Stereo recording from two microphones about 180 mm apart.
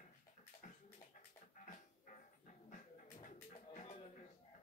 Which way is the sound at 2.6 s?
45° left (ahead or behind).